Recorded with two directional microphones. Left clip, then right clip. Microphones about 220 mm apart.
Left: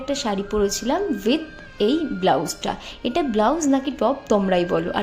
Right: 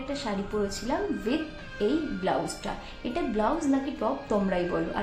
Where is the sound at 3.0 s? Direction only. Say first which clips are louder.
Left 8 dB; 40° left (ahead or behind).